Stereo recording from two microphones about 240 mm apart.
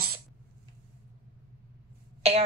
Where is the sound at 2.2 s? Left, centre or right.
Right.